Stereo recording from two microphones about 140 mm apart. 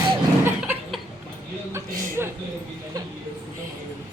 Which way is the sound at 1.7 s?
20° right (ahead or behind).